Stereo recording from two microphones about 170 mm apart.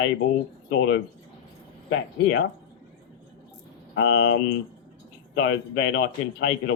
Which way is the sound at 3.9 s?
90° left.